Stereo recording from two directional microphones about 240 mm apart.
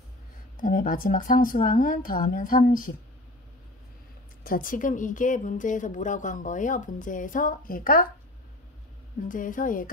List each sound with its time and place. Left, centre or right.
0.6 s a woman's voice: left
4.4 s a woman's voice: left
9.3 s a woman's voice: left